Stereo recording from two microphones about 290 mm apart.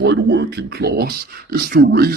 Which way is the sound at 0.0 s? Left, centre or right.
Right.